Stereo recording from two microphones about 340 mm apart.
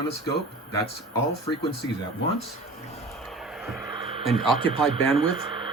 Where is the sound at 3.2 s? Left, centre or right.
Centre.